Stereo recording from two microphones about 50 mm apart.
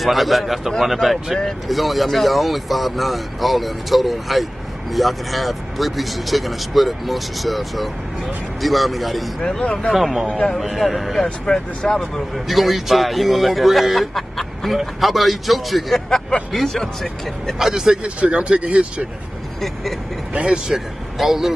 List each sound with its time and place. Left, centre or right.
0.0 s speech: centre
9.4 s speech: centre
9.9 s speech: centre
10.2 s a man's voice: left
10.6 s speech: centre
11.2 s speech: centre
12.4 s speech: centre
16.3 s speech: centre
17.6 s speech: centre
18.2 s speech: right
20.3 s speech: right
20.6 s speech: centre